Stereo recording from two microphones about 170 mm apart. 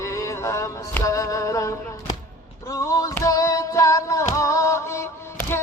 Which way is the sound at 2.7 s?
20° left (ahead or behind).